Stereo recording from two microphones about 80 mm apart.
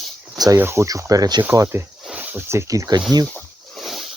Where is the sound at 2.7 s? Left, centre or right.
Right.